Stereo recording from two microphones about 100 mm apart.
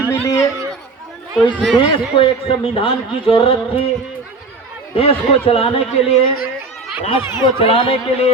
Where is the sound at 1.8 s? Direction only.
60° left (ahead or behind).